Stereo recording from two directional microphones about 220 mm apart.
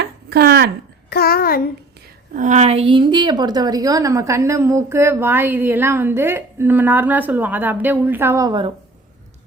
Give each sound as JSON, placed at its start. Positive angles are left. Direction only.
{"t": 0.0, "sound": "a sound", "side_deg": -45}
{"t": 1.1, "sound": "a child's voice", "side_deg": 45}
{"t": 2.3, "sound": "a woman's voice", "side_deg": -35}